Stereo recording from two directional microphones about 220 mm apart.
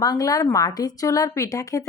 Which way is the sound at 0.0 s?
15° left (ahead or behind).